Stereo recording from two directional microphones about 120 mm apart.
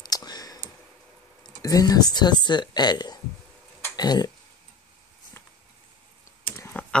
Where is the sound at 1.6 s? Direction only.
30° left (ahead or behind).